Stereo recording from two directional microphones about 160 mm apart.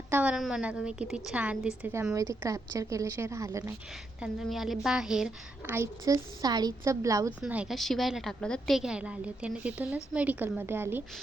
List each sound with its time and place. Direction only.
0.1 s a woman's voice: 10° right (ahead or behind)
4.2 s a woman's voice: centre (ahead or behind)
5.7 s a woman's voice: 15° right (ahead or behind)
7.4 s a woman's voice: 5° right (ahead or behind)